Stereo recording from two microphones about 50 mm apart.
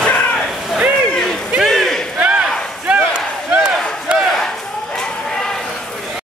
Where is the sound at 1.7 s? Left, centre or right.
Centre.